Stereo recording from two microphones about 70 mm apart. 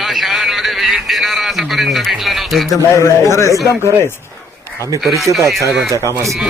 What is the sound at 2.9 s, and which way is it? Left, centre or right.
Speech, left.